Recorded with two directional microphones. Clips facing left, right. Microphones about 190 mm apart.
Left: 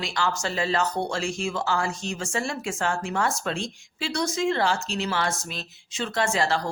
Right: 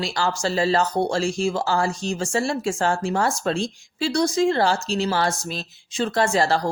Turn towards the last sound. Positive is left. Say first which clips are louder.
# right 4 dB
turn(degrees=-40)  # may be behind; listen again after turning